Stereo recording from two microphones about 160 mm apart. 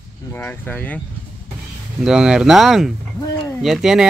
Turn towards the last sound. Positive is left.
turn(degrees=0)  # may be behind; listen again after turning